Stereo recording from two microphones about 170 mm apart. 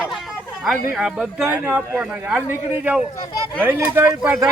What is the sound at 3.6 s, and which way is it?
Speech, 10° right (ahead or behind).